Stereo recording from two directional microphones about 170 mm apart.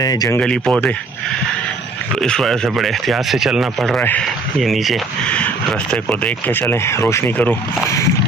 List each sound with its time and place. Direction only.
0.0 s speech: 20° left (ahead or behind)
0.3 s speech: 5° left (ahead or behind)
2.1 s speech: 5° left (ahead or behind)